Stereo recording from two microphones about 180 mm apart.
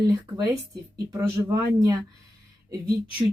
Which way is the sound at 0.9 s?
20° right (ahead or behind).